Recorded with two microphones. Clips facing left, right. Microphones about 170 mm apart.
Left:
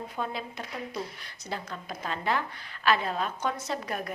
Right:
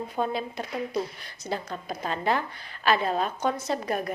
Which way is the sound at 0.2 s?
35° right (ahead or behind).